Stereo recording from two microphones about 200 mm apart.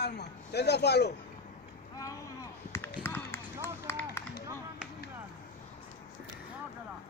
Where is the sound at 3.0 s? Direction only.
10° left (ahead or behind).